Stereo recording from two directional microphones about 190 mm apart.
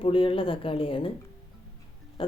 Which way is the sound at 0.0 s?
30° left (ahead or behind).